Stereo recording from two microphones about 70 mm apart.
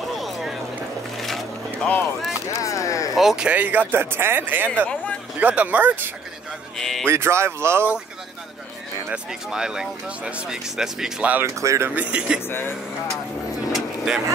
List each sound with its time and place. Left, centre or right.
0.1 s a sound: centre
1.2 s vehicle: centre
2.5 s a sound: left
3.2 s speech: centre
3.4 s a man's voice: right
4.6 s speech: centre
5.4 s a man's voice: right
6.8 s speech: centre
7.1 s speech: right
9.1 s speech: centre
11.4 s speech: right
11.9 s speech: right
12.4 s speech: left
13.7 s vehicle: centre